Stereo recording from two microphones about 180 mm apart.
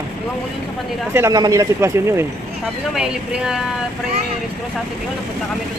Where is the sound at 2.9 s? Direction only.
5° right (ahead or behind).